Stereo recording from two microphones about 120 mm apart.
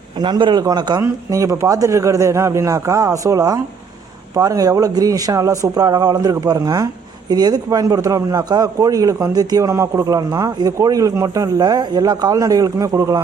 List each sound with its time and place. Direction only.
0.2 s a man's voice: 40° right (ahead or behind)